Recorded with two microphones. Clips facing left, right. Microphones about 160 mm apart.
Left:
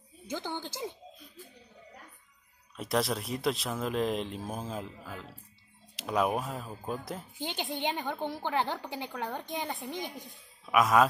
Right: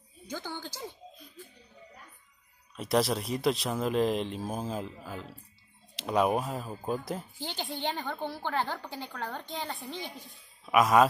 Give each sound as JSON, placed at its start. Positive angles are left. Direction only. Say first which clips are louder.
{"t": 0.3, "sound": "a woman's voice", "louder": "left 2 dB", "side_deg": 20}
{"t": 2.7, "sound": "speech", "louder": "right 3 dB", "side_deg": 0}
{"t": 5.9, "sound": "speech", "louder": "right 2 dB", "side_deg": 0}
{"t": 7.3, "sound": "a woman's voice", "louder": "left 2 dB", "side_deg": 20}
{"t": 10.6, "sound": "speech", "louder": "right 2 dB", "side_deg": 0}